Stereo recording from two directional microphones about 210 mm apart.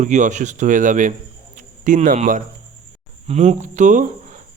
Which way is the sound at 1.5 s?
40° right (ahead or behind).